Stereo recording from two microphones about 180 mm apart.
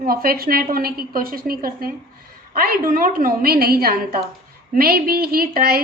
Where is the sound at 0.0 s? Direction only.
55° right (ahead or behind).